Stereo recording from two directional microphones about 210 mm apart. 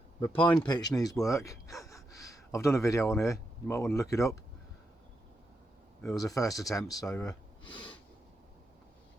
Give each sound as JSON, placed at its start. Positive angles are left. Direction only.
{"t": 0.2, "sound": "speech", "side_deg": 25}
{"t": 6.1, "sound": "speech", "side_deg": 15}